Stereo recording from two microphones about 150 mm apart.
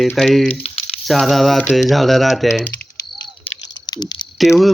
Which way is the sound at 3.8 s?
30° left (ahead or behind).